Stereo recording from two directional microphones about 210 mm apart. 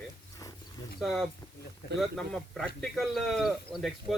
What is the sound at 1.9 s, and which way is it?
Speech, centre (ahead or behind).